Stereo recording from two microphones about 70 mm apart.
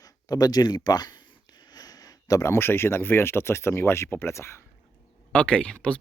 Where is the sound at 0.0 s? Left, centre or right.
Left.